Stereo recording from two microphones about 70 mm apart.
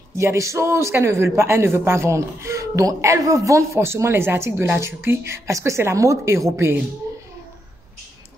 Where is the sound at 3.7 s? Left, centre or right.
Right.